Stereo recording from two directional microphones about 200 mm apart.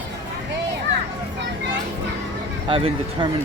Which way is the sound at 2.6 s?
25° right (ahead or behind).